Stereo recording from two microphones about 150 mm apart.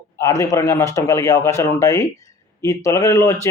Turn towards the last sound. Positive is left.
turn(degrees=20)  # may be behind; listen again after turning